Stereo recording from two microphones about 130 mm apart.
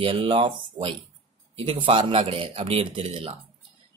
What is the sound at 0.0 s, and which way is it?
Speech, 40° right (ahead or behind).